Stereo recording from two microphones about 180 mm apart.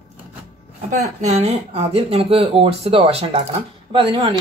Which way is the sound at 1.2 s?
35° right (ahead or behind).